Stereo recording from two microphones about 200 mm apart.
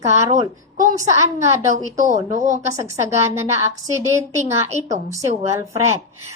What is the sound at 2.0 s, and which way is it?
Speech, 40° right (ahead or behind).